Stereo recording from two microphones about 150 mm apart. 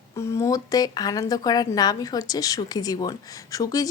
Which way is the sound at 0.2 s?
20° left (ahead or behind).